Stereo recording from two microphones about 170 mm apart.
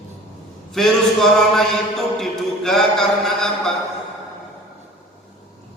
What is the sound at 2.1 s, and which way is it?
Music, centre (ahead or behind).